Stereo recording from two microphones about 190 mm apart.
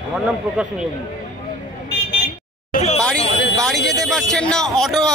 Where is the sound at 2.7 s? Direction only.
35° left (ahead or behind).